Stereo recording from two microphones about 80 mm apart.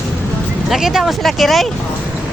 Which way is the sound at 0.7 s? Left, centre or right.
Centre.